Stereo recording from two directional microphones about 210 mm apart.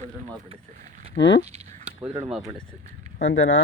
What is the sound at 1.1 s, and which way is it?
Speech, 55° left (ahead or behind).